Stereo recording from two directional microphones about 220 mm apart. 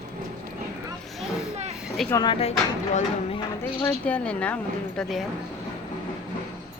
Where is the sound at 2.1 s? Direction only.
20° left (ahead or behind).